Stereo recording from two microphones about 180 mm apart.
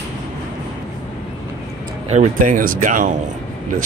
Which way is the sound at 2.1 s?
45° right (ahead or behind).